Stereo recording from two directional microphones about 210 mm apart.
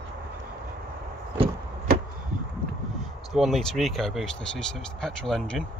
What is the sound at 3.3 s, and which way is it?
Speech, centre (ahead or behind).